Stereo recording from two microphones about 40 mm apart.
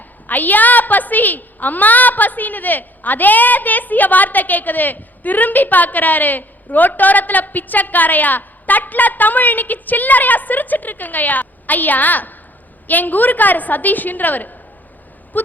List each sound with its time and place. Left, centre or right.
0.3 s a woman's voice: left